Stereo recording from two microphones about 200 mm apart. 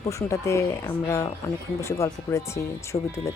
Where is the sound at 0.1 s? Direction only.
15° left (ahead or behind).